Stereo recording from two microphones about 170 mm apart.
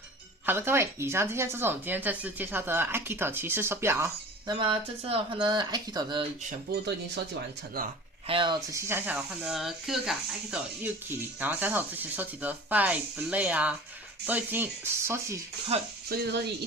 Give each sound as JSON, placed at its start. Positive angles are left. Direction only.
{"t": 0.4, "sound": "speech", "side_deg": -15}
{"t": 4.7, "sound": "speech", "side_deg": -35}
{"t": 6.7, "sound": "speech", "side_deg": -65}
{"t": 8.3, "sound": "speech", "side_deg": -30}
{"t": 8.9, "sound": "speech", "side_deg": -10}
{"t": 15.7, "sound": "speech", "side_deg": -35}
{"t": 16.0, "sound": "speech", "side_deg": -65}